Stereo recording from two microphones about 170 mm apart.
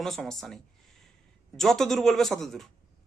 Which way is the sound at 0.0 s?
Centre (ahead or behind).